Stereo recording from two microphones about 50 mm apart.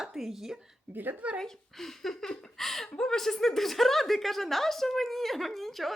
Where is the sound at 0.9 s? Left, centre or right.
Right.